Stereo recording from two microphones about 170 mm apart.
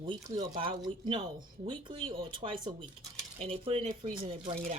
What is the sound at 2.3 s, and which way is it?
Speech, 30° right (ahead or behind).